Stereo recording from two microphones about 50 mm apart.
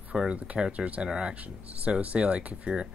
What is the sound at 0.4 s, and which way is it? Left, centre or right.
Speech, right.